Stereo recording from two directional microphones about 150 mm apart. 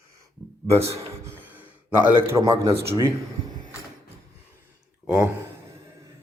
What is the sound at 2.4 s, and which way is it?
Speech, 25° right (ahead or behind).